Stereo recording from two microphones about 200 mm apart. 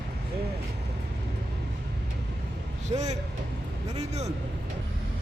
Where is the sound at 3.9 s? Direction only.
35° right (ahead or behind).